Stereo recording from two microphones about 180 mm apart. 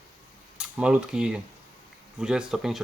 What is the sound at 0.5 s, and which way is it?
Speech, 5° right (ahead or behind).